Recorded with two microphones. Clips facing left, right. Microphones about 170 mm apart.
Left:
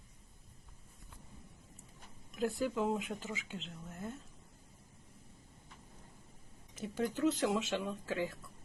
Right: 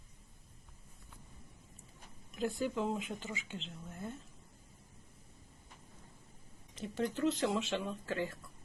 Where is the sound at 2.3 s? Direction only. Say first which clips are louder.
Left 1 dB; centre (ahead or behind).